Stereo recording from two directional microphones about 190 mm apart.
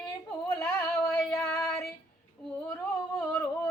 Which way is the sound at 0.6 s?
5° left (ahead or behind).